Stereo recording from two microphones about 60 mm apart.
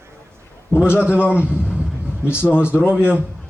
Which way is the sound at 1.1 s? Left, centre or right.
Centre.